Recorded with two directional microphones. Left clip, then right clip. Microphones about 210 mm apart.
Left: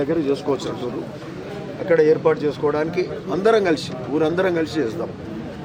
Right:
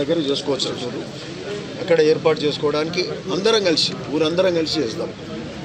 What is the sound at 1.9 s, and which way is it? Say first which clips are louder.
Speech: even; 5° right (ahead or behind).